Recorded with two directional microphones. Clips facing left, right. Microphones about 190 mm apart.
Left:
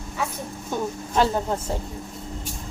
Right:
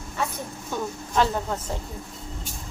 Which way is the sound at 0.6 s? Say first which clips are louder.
Left 3 dB; 20° left (ahead or behind).